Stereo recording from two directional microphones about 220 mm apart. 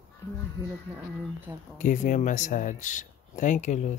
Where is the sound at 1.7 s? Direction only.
35° left (ahead or behind).